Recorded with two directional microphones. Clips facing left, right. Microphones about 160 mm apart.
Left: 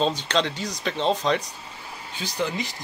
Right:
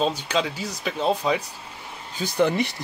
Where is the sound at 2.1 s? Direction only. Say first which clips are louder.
Right 7 dB; 55° right (ahead or behind).